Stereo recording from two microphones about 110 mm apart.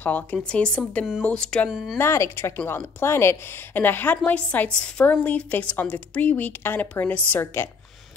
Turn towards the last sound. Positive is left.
turn(degrees=20)  # may be behind; listen again after turning